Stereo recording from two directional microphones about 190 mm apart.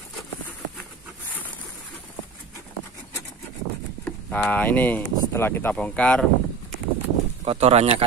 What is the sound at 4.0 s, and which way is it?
Speech, 10° left (ahead or behind).